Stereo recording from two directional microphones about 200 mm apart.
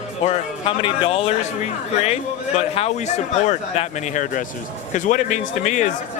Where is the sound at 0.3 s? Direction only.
30° left (ahead or behind).